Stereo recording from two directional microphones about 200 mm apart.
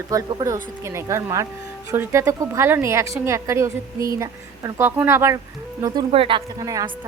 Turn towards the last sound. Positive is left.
turn(degrees=-15)  # may be behind; listen again after turning